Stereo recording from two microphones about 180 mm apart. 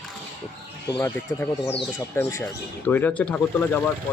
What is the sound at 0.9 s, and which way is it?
Speech, 15° left (ahead or behind).